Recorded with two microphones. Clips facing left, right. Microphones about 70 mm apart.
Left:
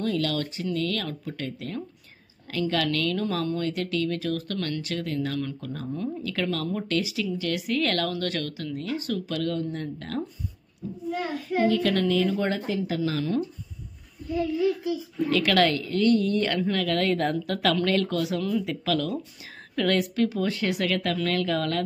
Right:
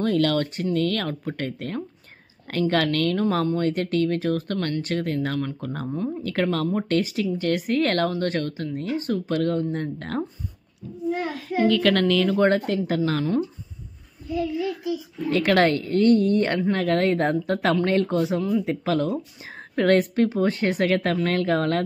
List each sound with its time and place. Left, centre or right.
0.0 s a woman's voice: right
11.6 s a woman's voice: right
13.2 s speech: right
15.2 s speech: right